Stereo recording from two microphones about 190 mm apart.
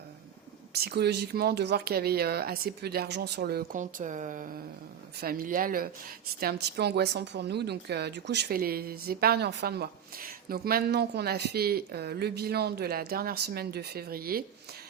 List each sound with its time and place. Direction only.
0.7 s speech: 55° right (ahead or behind)